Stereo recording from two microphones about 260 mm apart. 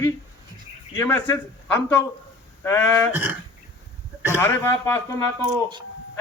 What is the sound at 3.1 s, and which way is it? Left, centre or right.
Speech, centre.